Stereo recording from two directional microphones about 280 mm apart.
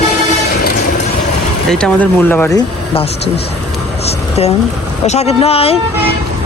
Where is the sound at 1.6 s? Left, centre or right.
Centre.